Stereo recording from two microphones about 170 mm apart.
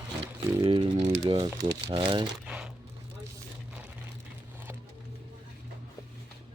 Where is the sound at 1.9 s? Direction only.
30° right (ahead or behind).